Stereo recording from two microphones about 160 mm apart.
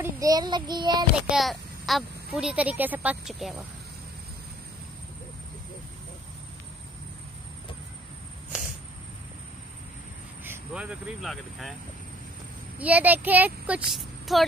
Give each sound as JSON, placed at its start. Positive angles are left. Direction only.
{"t": 0.0, "sound": "child singing", "side_deg": -20}
{"t": 1.1, "sound": "a woman's voice", "side_deg": 0}
{"t": 8.5, "sound": "a sound", "side_deg": -5}
{"t": 10.4, "sound": "speech", "side_deg": -10}
{"t": 12.7, "sound": "speech", "side_deg": -10}